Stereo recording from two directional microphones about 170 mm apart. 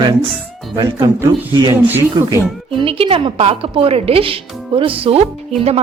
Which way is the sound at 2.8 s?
35° right (ahead or behind).